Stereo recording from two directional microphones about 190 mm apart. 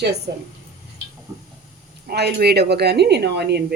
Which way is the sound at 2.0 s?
60° right (ahead or behind).